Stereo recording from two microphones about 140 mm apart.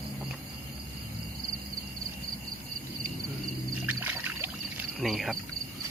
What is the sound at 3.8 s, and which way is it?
Music, 15° right (ahead or behind).